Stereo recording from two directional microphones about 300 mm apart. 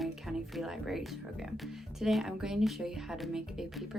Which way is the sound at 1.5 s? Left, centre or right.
Centre.